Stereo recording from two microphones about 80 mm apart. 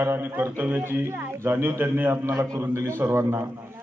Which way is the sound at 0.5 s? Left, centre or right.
Right.